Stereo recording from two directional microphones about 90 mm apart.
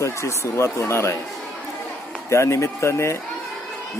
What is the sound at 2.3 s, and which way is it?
Speech, 35° left (ahead or behind).